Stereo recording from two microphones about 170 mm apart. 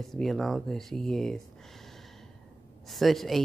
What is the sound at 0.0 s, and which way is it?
Speech, centre (ahead or behind).